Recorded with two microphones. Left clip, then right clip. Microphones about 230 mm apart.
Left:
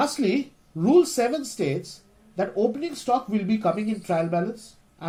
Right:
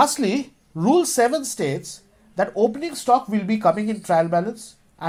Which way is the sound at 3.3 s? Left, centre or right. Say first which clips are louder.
Right 2 dB; right.